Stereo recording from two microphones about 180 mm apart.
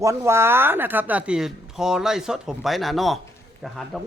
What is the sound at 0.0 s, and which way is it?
Speech, 15° right (ahead or behind).